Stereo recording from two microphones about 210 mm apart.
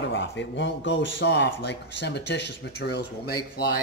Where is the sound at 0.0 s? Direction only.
60° left (ahead or behind).